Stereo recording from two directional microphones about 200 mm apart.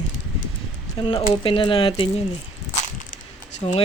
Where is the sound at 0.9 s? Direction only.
20° left (ahead or behind).